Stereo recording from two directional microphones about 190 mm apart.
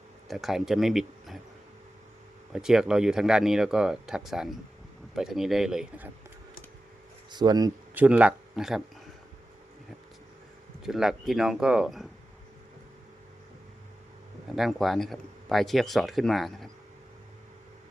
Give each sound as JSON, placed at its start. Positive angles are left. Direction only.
{"t": 0.3, "sound": "speech", "side_deg": 0}
{"t": 2.5, "sound": "speech", "side_deg": -5}
{"t": 7.3, "sound": "speech", "side_deg": -20}
{"t": 7.9, "sound": "speech", "side_deg": -10}
{"t": 10.8, "sound": "speech", "side_deg": 0}
{"t": 14.5, "sound": "speech", "side_deg": 0}